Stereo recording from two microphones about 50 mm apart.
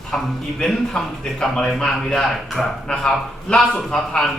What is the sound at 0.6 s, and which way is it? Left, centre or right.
A man's voice, centre.